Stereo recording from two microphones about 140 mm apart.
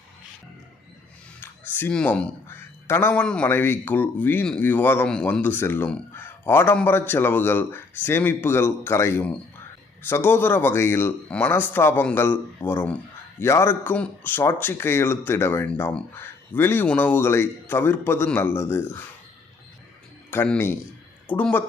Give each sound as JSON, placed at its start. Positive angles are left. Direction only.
{"t": 1.4, "sound": "speech", "side_deg": 15}
{"t": 20.3, "sound": "speech", "side_deg": 15}